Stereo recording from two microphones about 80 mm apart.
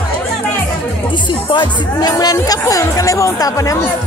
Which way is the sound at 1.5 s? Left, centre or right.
Left.